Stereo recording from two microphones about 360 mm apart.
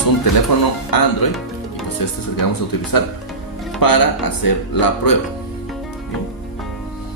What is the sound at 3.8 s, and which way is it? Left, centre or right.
Speech, left.